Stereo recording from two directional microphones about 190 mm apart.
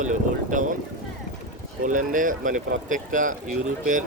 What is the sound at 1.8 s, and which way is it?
Speech, 45° right (ahead or behind).